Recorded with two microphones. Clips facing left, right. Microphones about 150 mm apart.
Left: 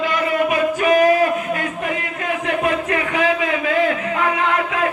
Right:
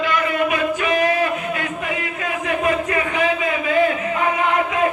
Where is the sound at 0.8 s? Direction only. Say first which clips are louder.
Left 7 dB; 40° left (ahead or behind).